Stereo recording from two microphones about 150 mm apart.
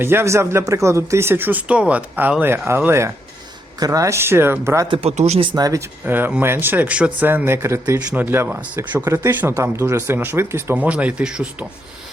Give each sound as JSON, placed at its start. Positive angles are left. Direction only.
{"t": 0.0, "sound": "speech", "side_deg": -15}
{"t": 4.9, "sound": "speech", "side_deg": -40}
{"t": 5.5, "sound": "speech", "side_deg": -25}
{"t": 6.1, "sound": "speech", "side_deg": -10}